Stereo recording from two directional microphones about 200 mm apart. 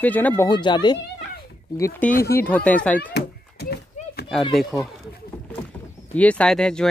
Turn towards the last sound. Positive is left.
turn(degrees=5)  # may be behind; listen again after turning